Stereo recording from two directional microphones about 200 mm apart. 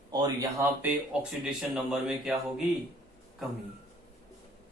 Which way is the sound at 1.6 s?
Centre (ahead or behind).